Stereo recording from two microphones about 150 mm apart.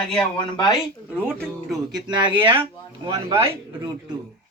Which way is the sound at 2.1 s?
30° right (ahead or behind).